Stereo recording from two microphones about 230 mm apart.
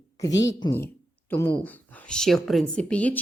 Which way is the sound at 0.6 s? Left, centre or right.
Centre.